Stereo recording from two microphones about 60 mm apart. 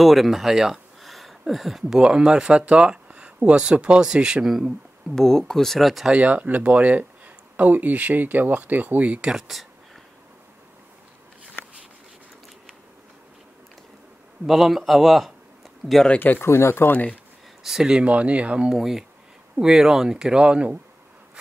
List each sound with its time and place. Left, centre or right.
0.0 s speech: centre
5.1 s speech: centre
6.1 s speech: right
9.5 s speech: centre
14.4 s speech: centre
15.8 s speech: right
16.2 s speech: left
16.4 s speech: left
16.9 s speech: left
17.6 s speech: centre
18.7 s speech: centre